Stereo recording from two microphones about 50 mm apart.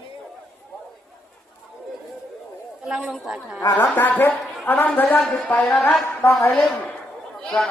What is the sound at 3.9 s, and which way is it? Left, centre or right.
Speech, left.